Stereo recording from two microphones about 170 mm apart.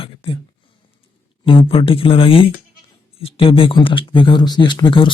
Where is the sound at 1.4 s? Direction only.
30° left (ahead or behind).